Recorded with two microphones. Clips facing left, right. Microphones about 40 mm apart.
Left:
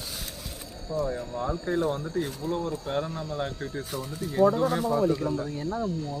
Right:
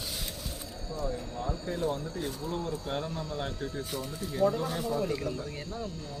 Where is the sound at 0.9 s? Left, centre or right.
Centre.